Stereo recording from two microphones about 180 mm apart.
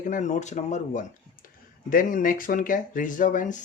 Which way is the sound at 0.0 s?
45° left (ahead or behind).